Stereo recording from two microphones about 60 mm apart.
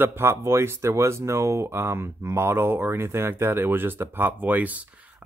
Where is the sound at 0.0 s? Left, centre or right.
Right.